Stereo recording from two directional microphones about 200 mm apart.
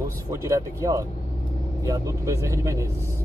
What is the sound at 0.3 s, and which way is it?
Speech, 15° right (ahead or behind).